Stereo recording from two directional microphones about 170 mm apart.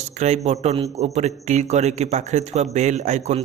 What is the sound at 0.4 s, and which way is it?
A man's voice, 40° right (ahead or behind).